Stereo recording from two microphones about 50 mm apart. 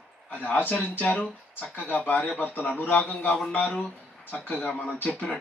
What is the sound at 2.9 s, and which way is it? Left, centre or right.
Speech, centre.